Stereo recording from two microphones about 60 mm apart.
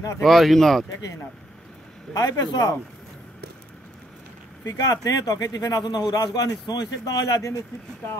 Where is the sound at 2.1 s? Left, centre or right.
Left.